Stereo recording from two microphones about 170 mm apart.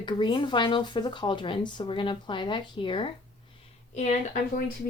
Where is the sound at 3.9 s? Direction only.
45° left (ahead or behind).